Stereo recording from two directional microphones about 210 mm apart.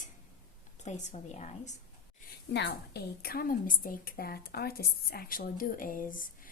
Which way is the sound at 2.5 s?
50° left (ahead or behind).